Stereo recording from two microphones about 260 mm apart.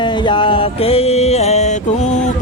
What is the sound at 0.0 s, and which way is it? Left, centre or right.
Mantra, centre.